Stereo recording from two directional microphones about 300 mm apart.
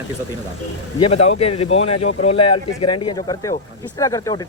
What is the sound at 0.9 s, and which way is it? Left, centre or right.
Speech, centre.